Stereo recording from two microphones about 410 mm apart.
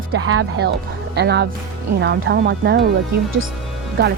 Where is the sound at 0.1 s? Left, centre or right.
Right.